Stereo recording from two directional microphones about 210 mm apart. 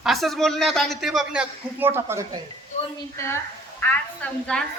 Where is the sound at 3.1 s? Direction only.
10° left (ahead or behind).